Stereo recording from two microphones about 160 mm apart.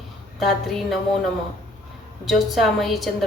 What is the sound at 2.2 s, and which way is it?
Speech, centre (ahead or behind).